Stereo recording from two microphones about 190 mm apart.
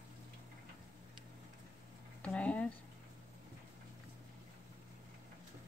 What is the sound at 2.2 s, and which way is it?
Speech, 5° left (ahead or behind).